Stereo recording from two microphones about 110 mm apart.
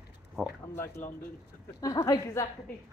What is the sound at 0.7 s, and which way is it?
A woman's voice, 25° left (ahead or behind).